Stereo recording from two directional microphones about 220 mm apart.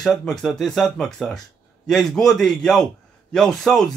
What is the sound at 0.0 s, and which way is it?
A man's voice, centre (ahead or behind).